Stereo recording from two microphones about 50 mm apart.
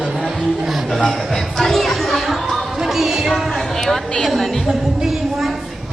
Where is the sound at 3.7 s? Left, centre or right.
Centre.